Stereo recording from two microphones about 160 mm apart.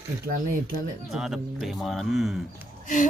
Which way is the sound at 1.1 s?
Centre (ahead or behind).